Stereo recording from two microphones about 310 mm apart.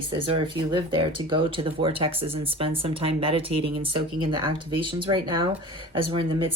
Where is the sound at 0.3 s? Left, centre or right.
Centre.